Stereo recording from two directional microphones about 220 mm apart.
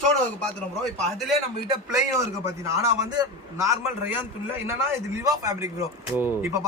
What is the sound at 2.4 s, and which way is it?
Speech, 15° right (ahead or behind).